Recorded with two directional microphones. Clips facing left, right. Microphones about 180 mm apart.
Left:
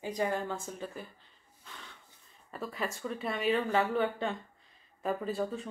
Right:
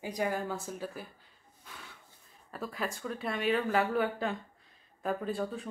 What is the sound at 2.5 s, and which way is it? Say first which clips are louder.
Speech: even; centre (ahead or behind).